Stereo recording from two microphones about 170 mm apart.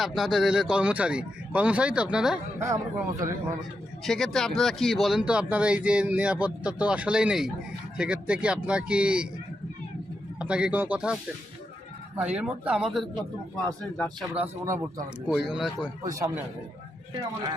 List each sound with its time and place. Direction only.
0.0 s speech: centre (ahead or behind)
2.6 s speech: 20° right (ahead or behind)
4.0 s speech: centre (ahead or behind)
10.4 s speech: 5° right (ahead or behind)
14.3 s speech: 15° right (ahead or behind)
15.3 s speech: 5° right (ahead or behind)
16.0 s a man's voice: 20° right (ahead or behind)